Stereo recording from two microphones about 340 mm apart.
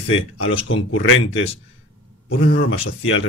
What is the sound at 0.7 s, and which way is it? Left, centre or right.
Speech, left.